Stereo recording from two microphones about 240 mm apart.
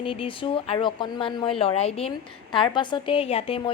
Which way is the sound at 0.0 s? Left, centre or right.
Left.